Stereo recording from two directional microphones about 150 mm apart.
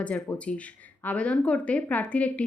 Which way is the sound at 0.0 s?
10° left (ahead or behind).